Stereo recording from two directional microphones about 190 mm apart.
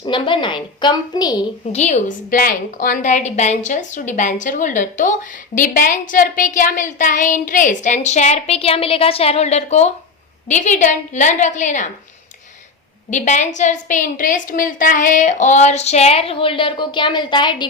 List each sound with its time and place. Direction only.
0.0 s a woman's voice: 25° left (ahead or behind)
1.7 s a woman's voice: 35° left (ahead or behind)
13.1 s a woman's voice: 40° left (ahead or behind)